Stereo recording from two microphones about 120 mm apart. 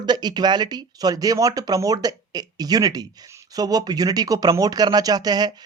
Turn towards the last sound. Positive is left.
turn(degrees=-35)  # may be behind; listen again after turning